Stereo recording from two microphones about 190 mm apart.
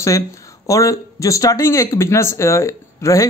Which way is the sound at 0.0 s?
15° left (ahead or behind).